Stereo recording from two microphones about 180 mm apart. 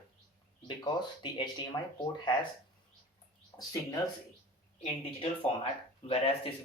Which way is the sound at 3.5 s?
15° left (ahead or behind).